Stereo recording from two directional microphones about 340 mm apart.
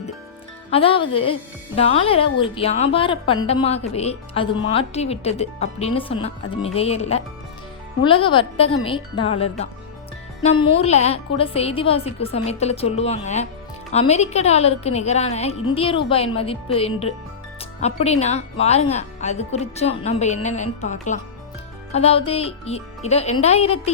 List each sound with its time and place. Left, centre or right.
0.7 s speech: centre